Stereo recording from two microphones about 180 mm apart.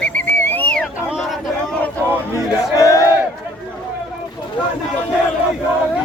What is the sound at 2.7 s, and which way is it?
Battle cry, 20° left (ahead or behind).